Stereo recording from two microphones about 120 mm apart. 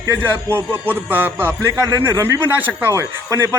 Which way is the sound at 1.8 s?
30° right (ahead or behind).